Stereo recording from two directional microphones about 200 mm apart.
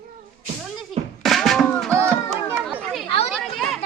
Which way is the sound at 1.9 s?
15° right (ahead or behind).